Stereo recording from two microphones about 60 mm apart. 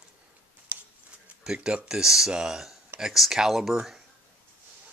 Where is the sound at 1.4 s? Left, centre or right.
Centre.